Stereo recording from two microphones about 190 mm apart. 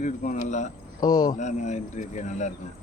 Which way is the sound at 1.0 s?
20° left (ahead or behind).